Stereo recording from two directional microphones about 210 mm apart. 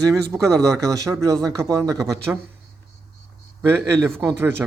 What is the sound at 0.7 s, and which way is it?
Speech, 15° right (ahead or behind).